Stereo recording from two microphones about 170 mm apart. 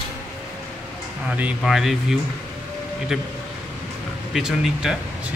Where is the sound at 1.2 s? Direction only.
10° right (ahead or behind).